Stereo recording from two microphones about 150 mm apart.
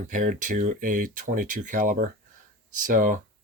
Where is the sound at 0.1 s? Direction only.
60° right (ahead or behind).